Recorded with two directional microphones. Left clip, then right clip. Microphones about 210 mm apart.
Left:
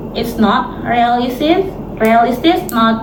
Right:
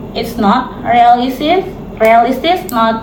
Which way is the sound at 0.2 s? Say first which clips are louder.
Right 1 dB; 15° right (ahead or behind).